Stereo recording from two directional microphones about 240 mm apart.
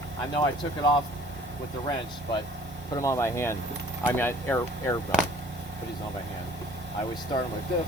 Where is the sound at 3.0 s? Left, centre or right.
Centre.